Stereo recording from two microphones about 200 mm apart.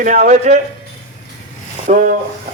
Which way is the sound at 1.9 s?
40° right (ahead or behind).